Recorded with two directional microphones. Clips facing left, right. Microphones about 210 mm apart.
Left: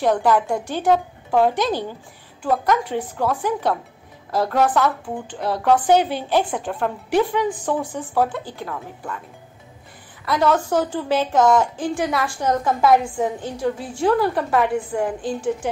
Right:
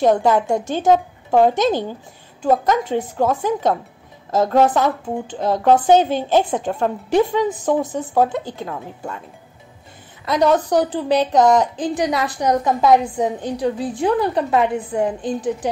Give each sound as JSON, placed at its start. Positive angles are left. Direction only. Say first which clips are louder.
{"t": 0.0, "sound": "a woman's voice", "louder": "right 3 dB", "side_deg": -25}
{"t": 10.2, "sound": "a woman's voice", "louder": "right 3 dB", "side_deg": -20}